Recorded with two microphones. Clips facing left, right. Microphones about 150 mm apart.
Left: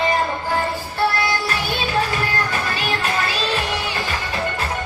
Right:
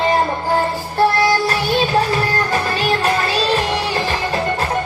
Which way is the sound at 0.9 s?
40° right (ahead or behind).